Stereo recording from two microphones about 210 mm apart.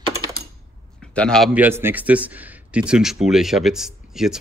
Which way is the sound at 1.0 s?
5° left (ahead or behind).